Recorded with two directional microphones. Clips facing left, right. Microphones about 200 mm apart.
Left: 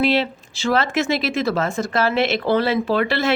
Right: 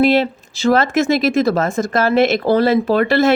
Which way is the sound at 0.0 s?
45° right (ahead or behind).